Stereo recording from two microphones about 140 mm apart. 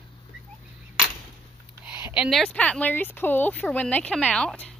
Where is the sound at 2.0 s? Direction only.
15° right (ahead or behind).